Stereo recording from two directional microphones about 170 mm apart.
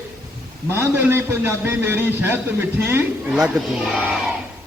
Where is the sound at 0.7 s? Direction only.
15° right (ahead or behind).